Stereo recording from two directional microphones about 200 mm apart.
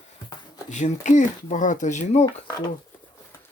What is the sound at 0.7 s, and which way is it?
Speech, 35° left (ahead or behind).